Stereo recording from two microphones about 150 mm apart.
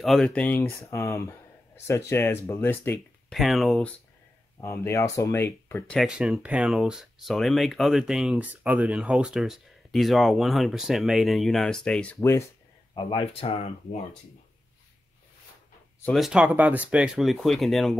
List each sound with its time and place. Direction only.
0.0 s speech: centre (ahead or behind)
3.3 s speech: centre (ahead or behind)
4.6 s speech: 20° left (ahead or behind)
5.9 s speech: 5° right (ahead or behind); by 12.4 s 15° left (ahead or behind)
12.9 s speech: 35° left (ahead or behind)
16.1 s speech: centre (ahead or behind)